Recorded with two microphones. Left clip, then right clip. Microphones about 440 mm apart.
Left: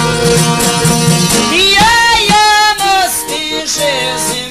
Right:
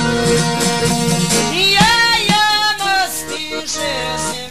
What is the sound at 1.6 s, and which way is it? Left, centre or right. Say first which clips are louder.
Music: left 4 dB; centre.